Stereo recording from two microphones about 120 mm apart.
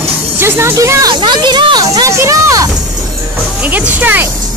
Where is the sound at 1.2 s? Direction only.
40° right (ahead or behind).